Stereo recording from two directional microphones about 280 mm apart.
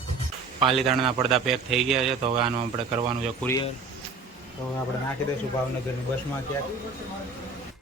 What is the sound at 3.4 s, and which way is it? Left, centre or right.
Speech, centre.